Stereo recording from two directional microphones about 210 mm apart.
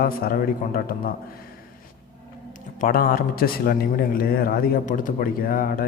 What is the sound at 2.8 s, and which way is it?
A man's voice, 40° left (ahead or behind).